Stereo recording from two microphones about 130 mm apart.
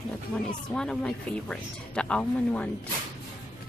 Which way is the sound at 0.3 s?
10° left (ahead or behind).